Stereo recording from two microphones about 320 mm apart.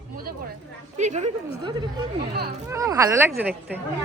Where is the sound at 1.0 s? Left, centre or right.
Right.